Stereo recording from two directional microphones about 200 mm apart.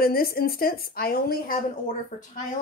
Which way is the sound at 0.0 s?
50° left (ahead or behind).